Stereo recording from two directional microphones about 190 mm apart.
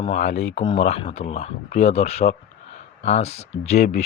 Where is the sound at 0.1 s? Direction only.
35° left (ahead or behind).